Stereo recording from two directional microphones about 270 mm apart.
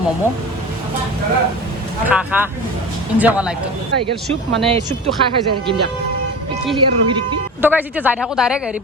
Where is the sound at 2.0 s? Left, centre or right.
Centre.